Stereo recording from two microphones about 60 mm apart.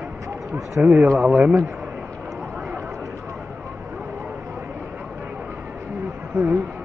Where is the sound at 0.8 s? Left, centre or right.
Right.